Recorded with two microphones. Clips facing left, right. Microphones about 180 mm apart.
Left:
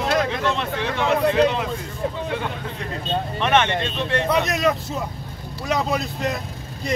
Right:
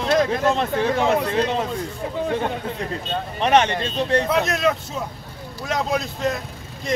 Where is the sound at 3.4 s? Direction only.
35° right (ahead or behind).